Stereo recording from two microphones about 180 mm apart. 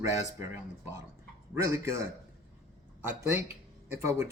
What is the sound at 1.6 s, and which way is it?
Speech, 15° right (ahead or behind).